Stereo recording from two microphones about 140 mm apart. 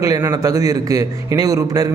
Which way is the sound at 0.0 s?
25° right (ahead or behind).